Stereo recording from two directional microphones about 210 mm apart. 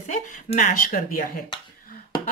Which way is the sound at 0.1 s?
35° left (ahead or behind).